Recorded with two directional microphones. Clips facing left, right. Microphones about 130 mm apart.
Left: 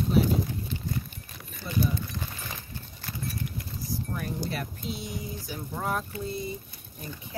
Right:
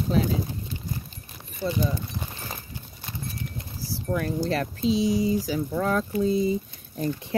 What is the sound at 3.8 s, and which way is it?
Speech, 90° right.